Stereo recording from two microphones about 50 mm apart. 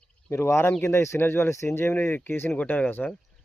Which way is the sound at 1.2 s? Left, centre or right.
Left.